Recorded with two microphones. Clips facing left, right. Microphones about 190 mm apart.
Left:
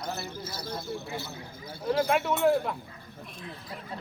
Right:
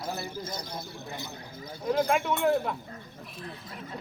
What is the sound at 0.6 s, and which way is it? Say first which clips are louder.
Speech: left 4 dB; 15° right (ahead or behind).